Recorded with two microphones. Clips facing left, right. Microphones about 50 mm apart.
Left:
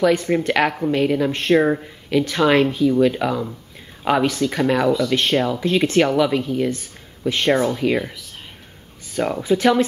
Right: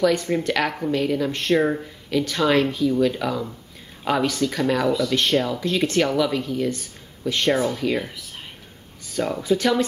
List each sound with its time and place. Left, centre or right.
0.5 s speech: centre
4.7 s speech: centre
5.1 s speech: centre
9.1 s speech: centre